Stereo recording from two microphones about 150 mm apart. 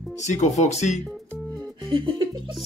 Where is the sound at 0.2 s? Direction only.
50° left (ahead or behind).